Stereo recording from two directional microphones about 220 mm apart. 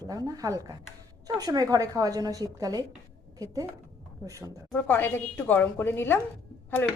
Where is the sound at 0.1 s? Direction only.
15° right (ahead or behind).